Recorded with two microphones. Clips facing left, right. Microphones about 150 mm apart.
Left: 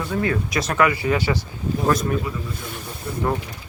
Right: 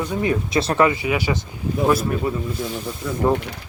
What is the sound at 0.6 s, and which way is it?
Speech, 30° right (ahead or behind).